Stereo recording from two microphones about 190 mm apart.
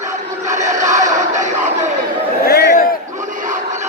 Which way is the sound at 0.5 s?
40° right (ahead or behind).